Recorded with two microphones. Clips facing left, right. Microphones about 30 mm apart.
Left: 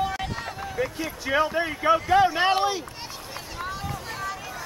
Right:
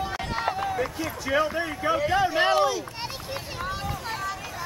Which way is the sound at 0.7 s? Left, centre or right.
Centre.